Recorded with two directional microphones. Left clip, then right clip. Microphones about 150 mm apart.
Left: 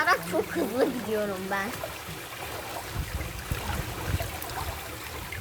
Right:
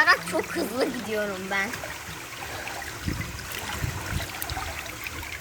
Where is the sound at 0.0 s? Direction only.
10° right (ahead or behind).